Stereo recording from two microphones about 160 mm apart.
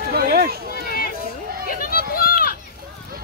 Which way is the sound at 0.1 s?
70° right (ahead or behind).